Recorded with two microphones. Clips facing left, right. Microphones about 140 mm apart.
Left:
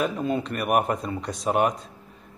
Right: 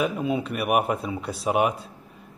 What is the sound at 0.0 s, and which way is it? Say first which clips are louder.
A man's voice: even; 5° right (ahead or behind).